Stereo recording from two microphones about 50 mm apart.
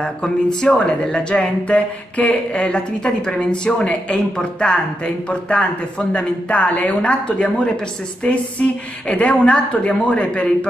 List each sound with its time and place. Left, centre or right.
0.0 s speech: centre